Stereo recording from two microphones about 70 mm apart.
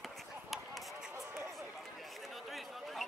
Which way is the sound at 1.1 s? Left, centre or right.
Right.